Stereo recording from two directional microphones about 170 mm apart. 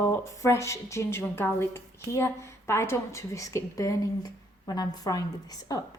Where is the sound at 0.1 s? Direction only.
15° left (ahead or behind).